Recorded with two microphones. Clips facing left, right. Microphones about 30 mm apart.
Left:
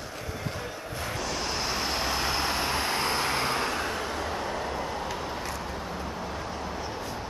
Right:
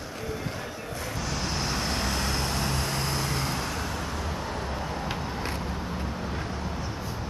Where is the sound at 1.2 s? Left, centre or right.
Centre; by 3.8 s left.